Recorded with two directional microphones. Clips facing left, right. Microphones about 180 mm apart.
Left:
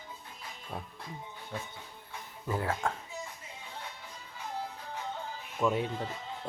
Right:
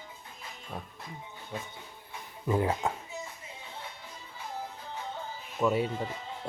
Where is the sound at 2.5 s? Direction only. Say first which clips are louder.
Right 4 dB; 15° right (ahead or behind).